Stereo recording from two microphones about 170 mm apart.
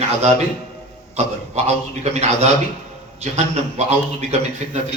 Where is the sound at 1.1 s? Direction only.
40° right (ahead or behind).